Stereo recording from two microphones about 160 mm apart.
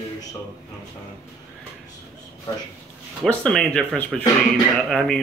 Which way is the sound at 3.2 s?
5° left (ahead or behind).